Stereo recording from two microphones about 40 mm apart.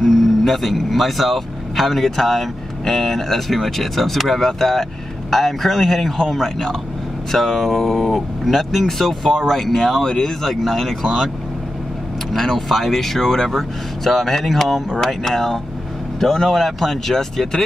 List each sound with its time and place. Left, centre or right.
0.0 s speech: centre
12.3 s speech: centre